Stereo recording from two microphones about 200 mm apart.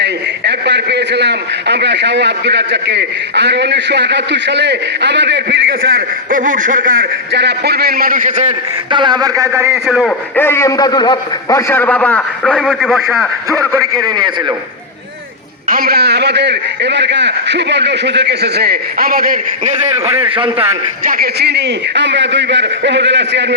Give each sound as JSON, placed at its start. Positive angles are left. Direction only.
{"t": 0.0, "sound": "a man's voice", "side_deg": -60}
{"t": 8.9, "sound": "a man's voice", "side_deg": -20}
{"t": 9.7, "sound": "a man's voice", "side_deg": 0}
{"t": 10.3, "sound": "a man's voice", "side_deg": 10}
{"t": 13.5, "sound": "a man's voice", "side_deg": -15}
{"t": 15.7, "sound": "a man's voice", "side_deg": -50}
{"t": 20.1, "sound": "a man's voice", "side_deg": -30}
{"t": 21.0, "sound": "a man's voice", "side_deg": -45}